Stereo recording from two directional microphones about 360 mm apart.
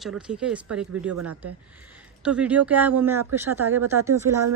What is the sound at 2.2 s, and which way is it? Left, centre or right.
Speech, centre.